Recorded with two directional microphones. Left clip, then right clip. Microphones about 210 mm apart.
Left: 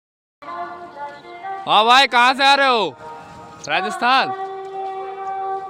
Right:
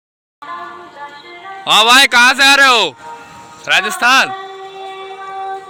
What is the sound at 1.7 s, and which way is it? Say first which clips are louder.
Speech: right 5 dB; 5° left (ahead or behind).